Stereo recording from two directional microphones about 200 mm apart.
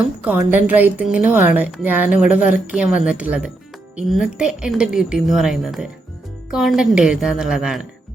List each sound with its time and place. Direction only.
0.3 s a woman's voice: 10° right (ahead or behind)